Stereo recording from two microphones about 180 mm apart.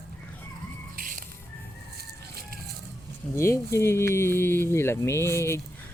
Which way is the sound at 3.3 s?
15° left (ahead or behind).